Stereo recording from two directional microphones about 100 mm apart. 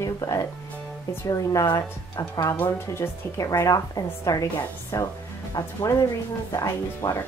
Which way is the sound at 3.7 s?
35° left (ahead or behind).